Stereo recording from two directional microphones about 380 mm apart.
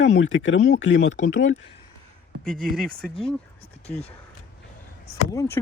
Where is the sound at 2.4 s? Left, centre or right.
Centre.